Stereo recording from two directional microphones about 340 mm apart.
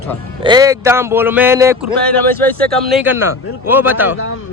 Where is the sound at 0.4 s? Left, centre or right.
Centre.